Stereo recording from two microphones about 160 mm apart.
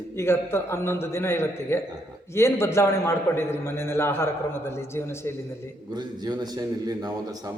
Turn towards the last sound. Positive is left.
turn(degrees=-25)  # may be behind; listen again after turning